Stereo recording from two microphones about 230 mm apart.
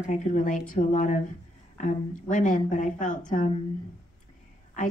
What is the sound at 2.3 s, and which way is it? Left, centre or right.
A woman's voice, left.